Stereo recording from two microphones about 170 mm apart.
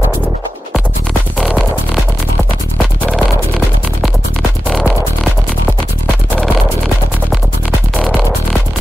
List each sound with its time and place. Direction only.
3.1 s music: centre (ahead or behind)